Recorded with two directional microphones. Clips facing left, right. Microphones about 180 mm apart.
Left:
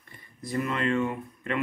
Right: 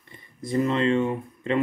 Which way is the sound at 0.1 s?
25° right (ahead or behind).